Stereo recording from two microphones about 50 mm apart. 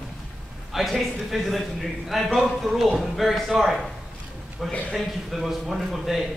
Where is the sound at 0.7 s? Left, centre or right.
Centre.